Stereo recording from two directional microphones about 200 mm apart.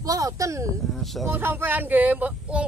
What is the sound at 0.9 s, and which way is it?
Speech, centre (ahead or behind).